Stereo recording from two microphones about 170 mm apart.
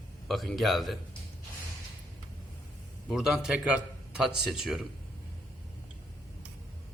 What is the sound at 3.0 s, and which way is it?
A man's voice, 5° right (ahead or behind).